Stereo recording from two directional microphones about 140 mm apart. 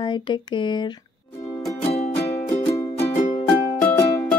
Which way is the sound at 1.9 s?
50° left (ahead or behind).